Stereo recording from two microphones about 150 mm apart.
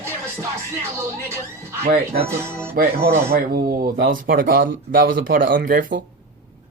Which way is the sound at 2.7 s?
80° right.